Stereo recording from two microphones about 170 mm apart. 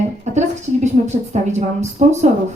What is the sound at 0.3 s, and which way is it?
A woman's voice, 40° right (ahead or behind).